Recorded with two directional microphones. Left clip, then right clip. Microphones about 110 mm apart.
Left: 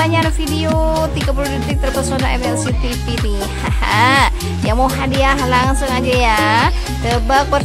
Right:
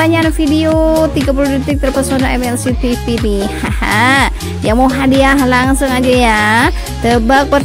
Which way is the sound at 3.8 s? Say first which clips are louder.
Right 2 dB; 30° right (ahead or behind).